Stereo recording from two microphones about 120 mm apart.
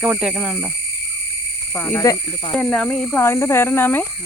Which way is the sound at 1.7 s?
15° left (ahead or behind).